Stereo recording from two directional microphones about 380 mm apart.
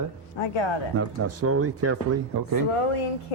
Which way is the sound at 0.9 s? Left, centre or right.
Right.